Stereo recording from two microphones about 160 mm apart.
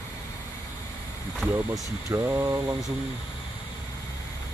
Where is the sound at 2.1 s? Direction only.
15° right (ahead or behind).